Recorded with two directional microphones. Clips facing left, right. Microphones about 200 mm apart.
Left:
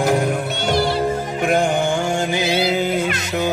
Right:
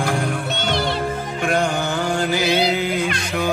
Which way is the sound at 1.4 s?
20° left (ahead or behind).